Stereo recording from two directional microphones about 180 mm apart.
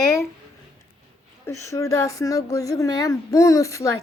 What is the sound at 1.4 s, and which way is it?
Child singing, 15° left (ahead or behind).